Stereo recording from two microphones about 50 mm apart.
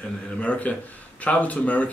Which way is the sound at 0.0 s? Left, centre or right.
Left.